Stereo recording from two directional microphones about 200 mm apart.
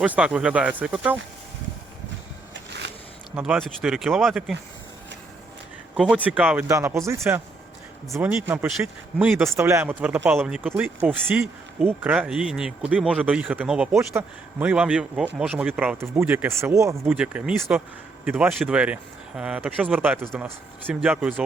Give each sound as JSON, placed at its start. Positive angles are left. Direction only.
{"t": 0.0, "sound": "speech", "side_deg": -5}
{"t": 2.5, "sound": "a sound", "side_deg": -55}
{"t": 3.3, "sound": "speech", "side_deg": -5}
{"t": 6.0, "sound": "speech", "side_deg": -5}